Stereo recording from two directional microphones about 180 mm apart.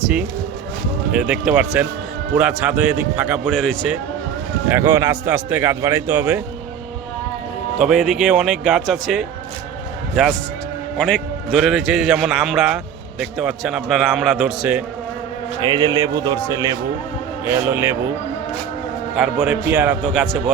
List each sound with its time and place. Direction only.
1.1 s a man's voice: 5° right (ahead or behind)
4.7 s speech: 10° right (ahead or behind)
7.8 s a man's voice: centre (ahead or behind)
10.9 s a man's voice: 5° left (ahead or behind)
15.6 s a man's voice: 25° right (ahead or behind)
19.1 s a man's voice: 5° right (ahead or behind)
20.1 s a man's voice: centre (ahead or behind)